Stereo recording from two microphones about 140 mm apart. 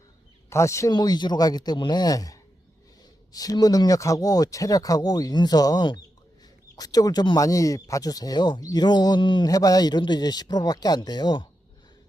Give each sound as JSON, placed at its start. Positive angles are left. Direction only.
{"t": 0.5, "sound": "speech", "side_deg": 20}